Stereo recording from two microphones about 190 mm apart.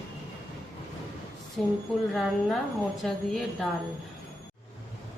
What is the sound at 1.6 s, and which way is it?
A woman's voice, 5° left (ahead or behind).